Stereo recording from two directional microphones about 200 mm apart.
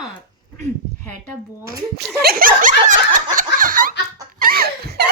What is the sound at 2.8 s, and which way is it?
Fowl, 40° right (ahead or behind).